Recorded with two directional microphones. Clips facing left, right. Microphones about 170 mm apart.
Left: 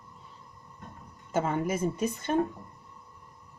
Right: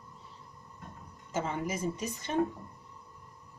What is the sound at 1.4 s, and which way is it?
Speech, 55° left (ahead or behind).